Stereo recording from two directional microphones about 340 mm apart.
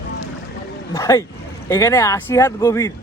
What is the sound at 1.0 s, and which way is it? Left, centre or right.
Speech, centre.